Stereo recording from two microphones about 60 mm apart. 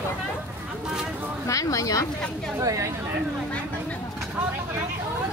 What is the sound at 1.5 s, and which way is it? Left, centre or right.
Speech, left.